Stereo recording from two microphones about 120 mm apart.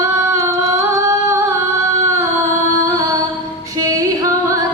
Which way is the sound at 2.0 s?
25° right (ahead or behind).